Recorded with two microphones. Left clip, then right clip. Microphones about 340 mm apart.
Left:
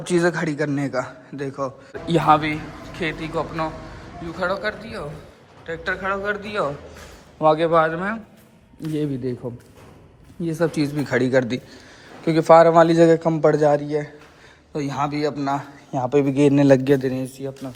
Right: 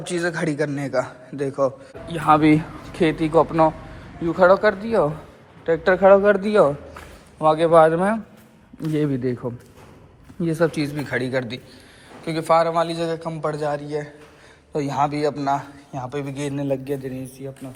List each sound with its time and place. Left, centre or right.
0.2 s a man's voice: centre
2.4 s a man's voice: centre
7.3 s a man's voice: centre